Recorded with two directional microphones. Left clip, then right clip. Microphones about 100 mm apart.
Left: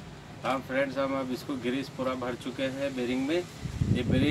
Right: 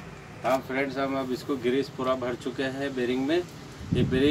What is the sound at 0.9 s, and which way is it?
Speech, 60° left (ahead or behind).